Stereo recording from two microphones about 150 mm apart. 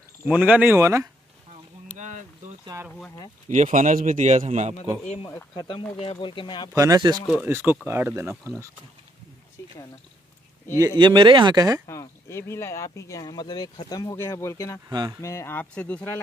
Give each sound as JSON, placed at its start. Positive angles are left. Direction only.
{"t": 0.3, "sound": "speech", "side_deg": -10}
{"t": 1.9, "sound": "a sound", "side_deg": -55}
{"t": 2.7, "sound": "speech", "side_deg": -20}
{"t": 3.4, "sound": "a man's voice", "side_deg": -55}
{"t": 5.3, "sound": "speech", "side_deg": 30}
{"t": 6.7, "sound": "speech", "side_deg": -25}
{"t": 7.4, "sound": "speech", "side_deg": -15}
{"t": 9.6, "sound": "a sound", "side_deg": 20}
{"t": 10.8, "sound": "speech", "side_deg": -25}
{"t": 11.8, "sound": "speech", "side_deg": 20}
{"t": 14.9, "sound": "speech", "side_deg": -25}
{"t": 15.2, "sound": "speech", "side_deg": 15}